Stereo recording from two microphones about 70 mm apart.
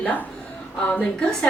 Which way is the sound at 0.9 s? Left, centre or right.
Centre.